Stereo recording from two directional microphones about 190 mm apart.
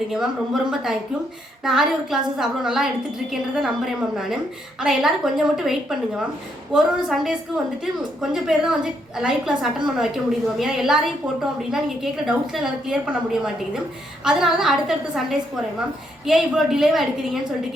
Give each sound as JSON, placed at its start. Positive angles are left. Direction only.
{"t": 0.1, "sound": "a woman's voice", "side_deg": 0}
{"t": 4.8, "sound": "a woman's voice", "side_deg": 0}